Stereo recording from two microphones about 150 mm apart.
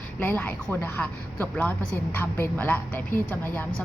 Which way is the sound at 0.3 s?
10° left (ahead or behind).